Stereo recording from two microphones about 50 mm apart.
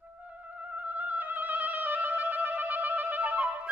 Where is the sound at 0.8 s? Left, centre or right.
Right.